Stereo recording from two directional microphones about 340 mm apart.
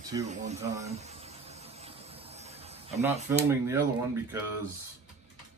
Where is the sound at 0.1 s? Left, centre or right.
Centre.